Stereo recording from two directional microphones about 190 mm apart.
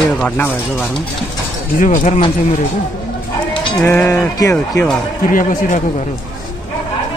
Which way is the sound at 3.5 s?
15° left (ahead or behind).